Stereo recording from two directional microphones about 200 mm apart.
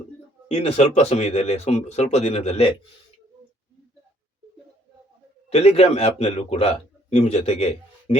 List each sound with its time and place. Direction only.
0.4 s speech: 35° left (ahead or behind)
5.5 s a man's voice: 30° left (ahead or behind)